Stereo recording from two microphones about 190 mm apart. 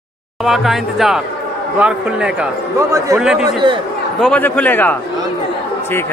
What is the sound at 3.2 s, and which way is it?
Speech, 5° right (ahead or behind).